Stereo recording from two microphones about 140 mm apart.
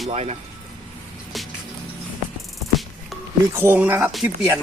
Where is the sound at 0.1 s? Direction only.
50° right (ahead or behind).